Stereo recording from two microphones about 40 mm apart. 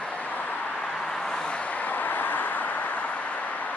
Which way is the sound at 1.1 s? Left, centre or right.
Centre.